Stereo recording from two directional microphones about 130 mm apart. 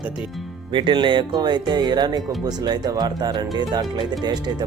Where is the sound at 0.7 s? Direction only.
40° right (ahead or behind).